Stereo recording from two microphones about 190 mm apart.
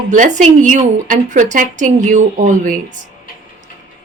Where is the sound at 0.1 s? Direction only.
40° right (ahead or behind).